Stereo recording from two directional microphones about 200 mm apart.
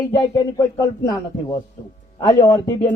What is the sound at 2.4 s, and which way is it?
Speech, 20° left (ahead or behind).